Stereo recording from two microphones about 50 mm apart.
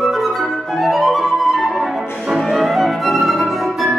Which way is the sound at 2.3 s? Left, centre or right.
Centre.